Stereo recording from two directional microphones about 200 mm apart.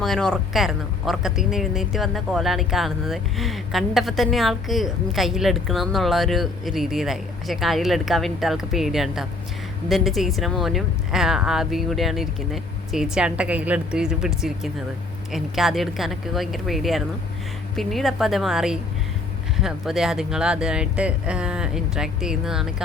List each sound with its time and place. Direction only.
0.0 s speech: 5° left (ahead or behind)